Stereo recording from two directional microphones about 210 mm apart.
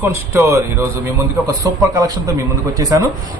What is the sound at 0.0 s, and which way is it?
A man's voice, 15° right (ahead or behind).